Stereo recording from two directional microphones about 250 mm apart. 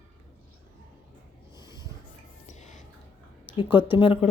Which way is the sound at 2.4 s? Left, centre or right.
Left.